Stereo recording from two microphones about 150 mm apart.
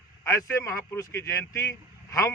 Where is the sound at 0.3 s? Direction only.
20° left (ahead or behind).